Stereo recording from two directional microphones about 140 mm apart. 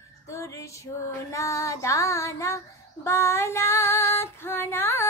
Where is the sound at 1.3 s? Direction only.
20° left (ahead or behind).